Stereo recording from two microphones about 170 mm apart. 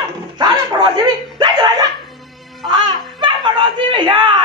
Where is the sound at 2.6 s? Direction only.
25° right (ahead or behind).